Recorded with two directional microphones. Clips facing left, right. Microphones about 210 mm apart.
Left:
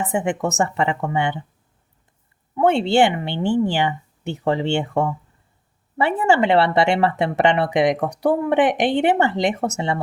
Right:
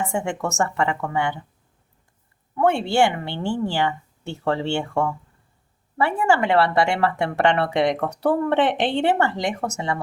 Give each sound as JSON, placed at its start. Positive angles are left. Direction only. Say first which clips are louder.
{"t": 0.1, "sound": "speech", "louder": "left 4 dB", "side_deg": 20}
{"t": 2.6, "sound": "speech", "louder": "left 3 dB", "side_deg": 20}